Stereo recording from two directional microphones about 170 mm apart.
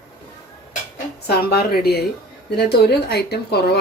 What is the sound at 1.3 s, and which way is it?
Speech, 70° left (ahead or behind).